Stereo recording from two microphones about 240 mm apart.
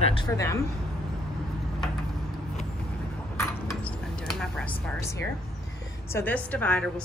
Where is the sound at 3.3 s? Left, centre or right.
Centre.